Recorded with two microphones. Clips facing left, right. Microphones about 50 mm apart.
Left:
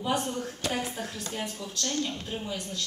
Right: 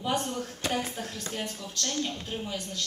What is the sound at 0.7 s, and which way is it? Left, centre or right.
Speech, centre.